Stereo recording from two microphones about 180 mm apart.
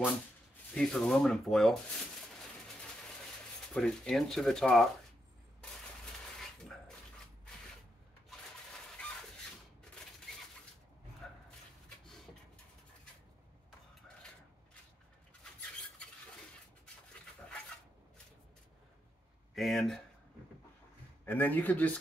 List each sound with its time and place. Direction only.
0.7 s speech: 5° left (ahead or behind)
3.7 s speech: 5° left (ahead or behind)
9.0 s a sound: 5° left (ahead or behind)
11.2 s dog: 5° left (ahead or behind)
19.5 s speech: centre (ahead or behind)
21.3 s speech: 10° left (ahead or behind)